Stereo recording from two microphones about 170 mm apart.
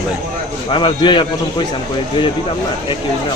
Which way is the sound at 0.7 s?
30° left (ahead or behind).